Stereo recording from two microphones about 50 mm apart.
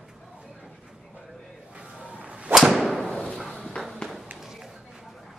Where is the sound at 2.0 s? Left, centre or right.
Right.